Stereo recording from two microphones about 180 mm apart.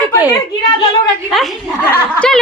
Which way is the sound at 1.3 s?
Centre (ahead or behind).